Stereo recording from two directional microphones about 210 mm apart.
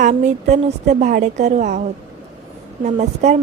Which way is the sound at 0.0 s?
35° right (ahead or behind).